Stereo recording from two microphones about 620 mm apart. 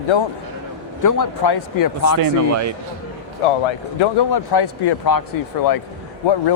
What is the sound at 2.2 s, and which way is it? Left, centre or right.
Speech, right.